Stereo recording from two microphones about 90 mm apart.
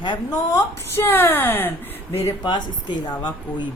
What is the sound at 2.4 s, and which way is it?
A woman's voice, 55° left (ahead or behind).